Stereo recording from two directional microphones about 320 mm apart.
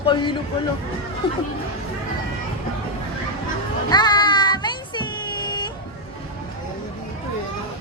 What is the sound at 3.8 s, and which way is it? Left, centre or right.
Music, centre.